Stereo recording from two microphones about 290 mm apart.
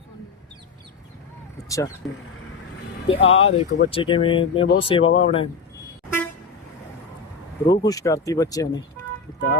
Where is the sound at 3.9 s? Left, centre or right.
Centre.